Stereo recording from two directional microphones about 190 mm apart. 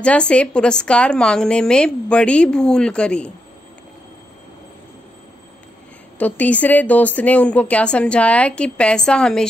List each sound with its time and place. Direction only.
0.0 s a woman's voice: 5° left (ahead or behind)
6.1 s a woman's voice: 10° left (ahead or behind)